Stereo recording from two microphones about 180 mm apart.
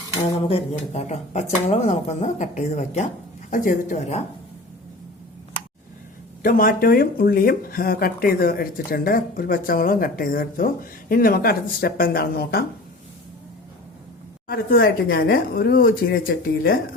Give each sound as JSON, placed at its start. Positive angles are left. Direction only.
{"t": 0.4, "sound": "speech", "side_deg": 35}
{"t": 6.4, "sound": "speech", "side_deg": 50}
{"t": 14.4, "sound": "speech", "side_deg": 55}